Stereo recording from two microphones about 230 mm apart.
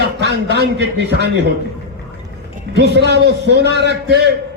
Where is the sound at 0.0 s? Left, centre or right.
Right.